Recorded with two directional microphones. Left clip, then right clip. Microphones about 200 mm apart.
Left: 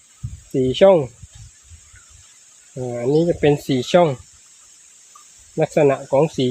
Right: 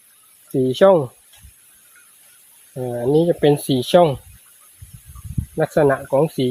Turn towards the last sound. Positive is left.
turn(degrees=-5)  # may be behind; listen again after turning